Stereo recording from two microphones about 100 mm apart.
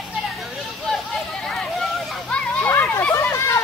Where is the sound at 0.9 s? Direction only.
5° left (ahead or behind); by 3.5 s 25° left (ahead or behind).